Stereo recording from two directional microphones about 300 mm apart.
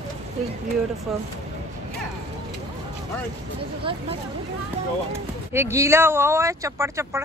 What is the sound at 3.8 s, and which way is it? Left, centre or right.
Speech, centre.